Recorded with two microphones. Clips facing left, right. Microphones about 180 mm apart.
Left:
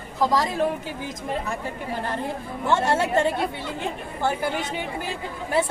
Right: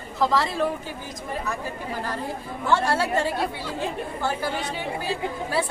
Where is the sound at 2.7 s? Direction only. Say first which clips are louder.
Left 1 dB; 20° left (ahead or behind).